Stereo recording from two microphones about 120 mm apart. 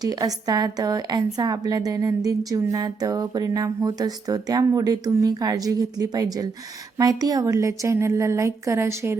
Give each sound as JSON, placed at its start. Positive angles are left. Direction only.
{"t": 0.0, "sound": "a woman's voice", "side_deg": -30}